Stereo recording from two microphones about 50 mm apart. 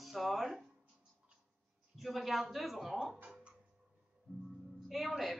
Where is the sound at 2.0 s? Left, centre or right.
Centre.